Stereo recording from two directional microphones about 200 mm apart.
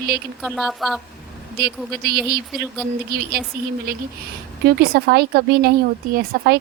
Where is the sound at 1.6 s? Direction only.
50° right (ahead or behind).